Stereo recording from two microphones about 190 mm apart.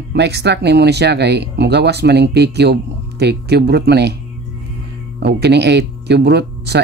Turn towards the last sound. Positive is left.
turn(degrees=-60)  # may be behind; listen again after turning